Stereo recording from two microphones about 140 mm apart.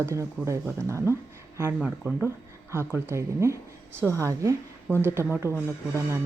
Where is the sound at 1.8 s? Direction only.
10° right (ahead or behind).